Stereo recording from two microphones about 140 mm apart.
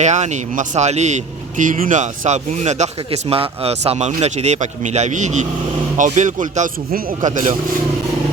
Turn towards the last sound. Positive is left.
turn(degrees=-60)  # may be behind; listen again after turning